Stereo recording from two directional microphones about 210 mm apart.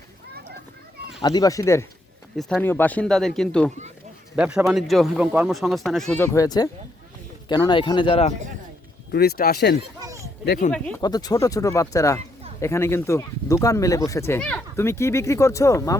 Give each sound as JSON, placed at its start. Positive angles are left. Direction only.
{"t": 1.2, "sound": "speech", "side_deg": 20}
{"t": 2.3, "sound": "speech", "side_deg": 0}
{"t": 9.1, "sound": "speech", "side_deg": 50}
{"t": 10.0, "sound": "a sound", "side_deg": -15}
{"t": 10.7, "sound": "speech", "side_deg": 5}
{"t": 11.0, "sound": "speech", "side_deg": 20}